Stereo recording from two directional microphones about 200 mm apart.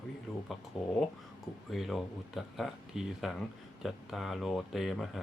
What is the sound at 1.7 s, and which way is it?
Speech, centre (ahead or behind).